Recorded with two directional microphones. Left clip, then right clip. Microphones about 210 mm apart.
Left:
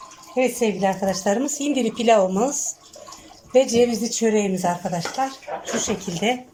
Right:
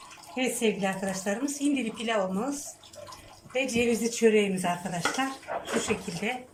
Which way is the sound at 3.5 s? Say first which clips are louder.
Left 10 dB; 30° left (ahead or behind).